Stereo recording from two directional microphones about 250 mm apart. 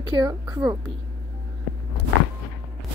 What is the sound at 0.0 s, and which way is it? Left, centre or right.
Speech, centre.